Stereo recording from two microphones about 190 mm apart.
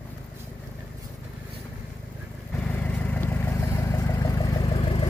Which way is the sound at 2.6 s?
10° left (ahead or behind).